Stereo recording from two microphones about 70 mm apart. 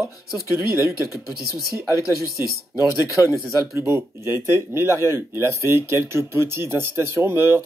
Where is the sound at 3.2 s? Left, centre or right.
Right.